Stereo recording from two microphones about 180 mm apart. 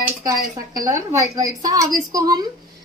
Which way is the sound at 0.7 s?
20° right (ahead or behind).